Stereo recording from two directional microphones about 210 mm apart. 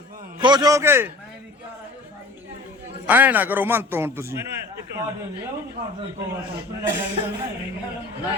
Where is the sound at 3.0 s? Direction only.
10° right (ahead or behind).